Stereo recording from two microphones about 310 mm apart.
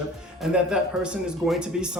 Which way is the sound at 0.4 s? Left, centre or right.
Centre.